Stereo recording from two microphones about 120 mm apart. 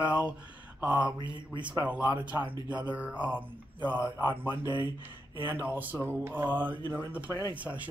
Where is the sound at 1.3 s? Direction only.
40° right (ahead or behind).